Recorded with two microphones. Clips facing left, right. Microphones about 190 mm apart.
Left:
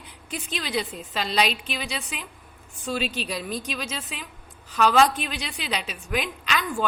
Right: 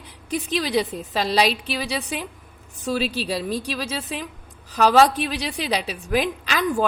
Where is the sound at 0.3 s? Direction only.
35° right (ahead or behind).